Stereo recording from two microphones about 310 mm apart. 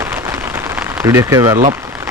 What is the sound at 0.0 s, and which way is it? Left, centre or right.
Rain on surface, centre.